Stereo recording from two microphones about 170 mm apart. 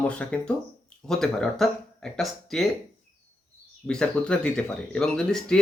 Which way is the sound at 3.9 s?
5° left (ahead or behind).